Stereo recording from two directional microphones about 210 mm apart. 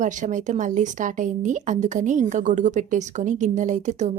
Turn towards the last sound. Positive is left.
turn(degrees=-35)  # may be behind; listen again after turning